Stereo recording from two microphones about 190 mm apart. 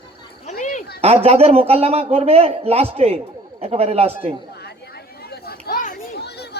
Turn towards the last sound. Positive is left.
turn(degrees=60)  # may be behind; listen again after turning